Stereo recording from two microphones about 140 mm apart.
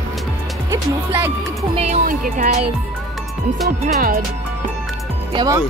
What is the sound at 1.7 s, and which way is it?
Speech, 50° right (ahead or behind).